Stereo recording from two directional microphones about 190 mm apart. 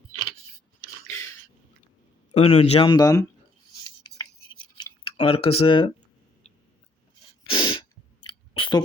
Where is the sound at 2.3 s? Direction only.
35° left (ahead or behind).